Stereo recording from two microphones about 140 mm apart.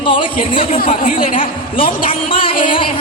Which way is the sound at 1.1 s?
40° left (ahead or behind).